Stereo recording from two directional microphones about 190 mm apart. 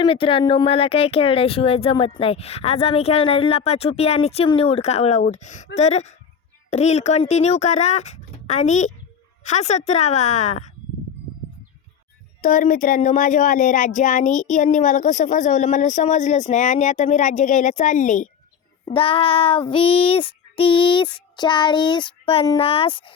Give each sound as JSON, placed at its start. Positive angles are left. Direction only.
{"t": 0.0, "sound": "speech", "side_deg": 30}
{"t": 12.4, "sound": "speech", "side_deg": 45}
{"t": 18.9, "sound": "child singing", "side_deg": 30}